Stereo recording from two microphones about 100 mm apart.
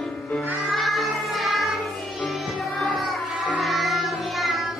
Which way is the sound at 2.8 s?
Centre (ahead or behind).